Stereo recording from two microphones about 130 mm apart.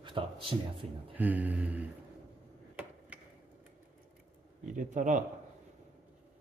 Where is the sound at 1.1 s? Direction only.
10° right (ahead or behind).